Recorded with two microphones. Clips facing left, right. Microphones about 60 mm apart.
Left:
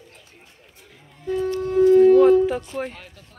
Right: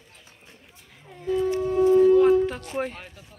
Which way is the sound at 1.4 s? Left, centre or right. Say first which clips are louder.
Even; right.